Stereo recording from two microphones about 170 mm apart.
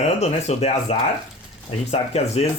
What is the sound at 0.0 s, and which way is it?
Speech, 40° left (ahead or behind).